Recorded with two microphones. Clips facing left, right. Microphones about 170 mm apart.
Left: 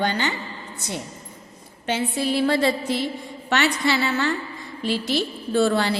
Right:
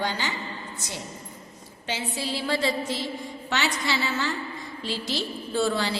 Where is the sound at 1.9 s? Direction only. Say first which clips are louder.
Left 7 dB; 60° left (ahead or behind).